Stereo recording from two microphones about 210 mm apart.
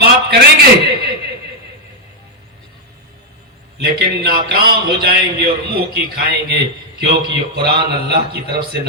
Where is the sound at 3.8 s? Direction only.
50° right (ahead or behind).